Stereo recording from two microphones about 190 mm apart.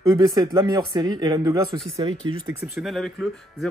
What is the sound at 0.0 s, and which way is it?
Speech, 20° right (ahead or behind).